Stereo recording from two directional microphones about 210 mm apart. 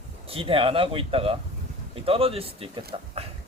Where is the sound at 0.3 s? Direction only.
25° right (ahead or behind).